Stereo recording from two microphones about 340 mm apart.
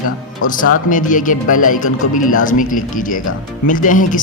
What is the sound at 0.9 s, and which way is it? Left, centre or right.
A man's voice, left.